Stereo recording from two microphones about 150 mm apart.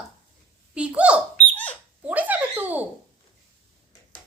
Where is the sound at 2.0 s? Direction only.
10° right (ahead or behind).